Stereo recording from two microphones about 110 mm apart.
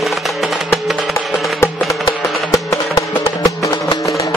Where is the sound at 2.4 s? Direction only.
30° left (ahead or behind).